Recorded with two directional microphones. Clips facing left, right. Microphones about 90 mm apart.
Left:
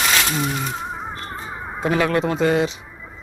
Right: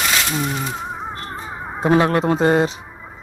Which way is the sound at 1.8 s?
30° right (ahead or behind).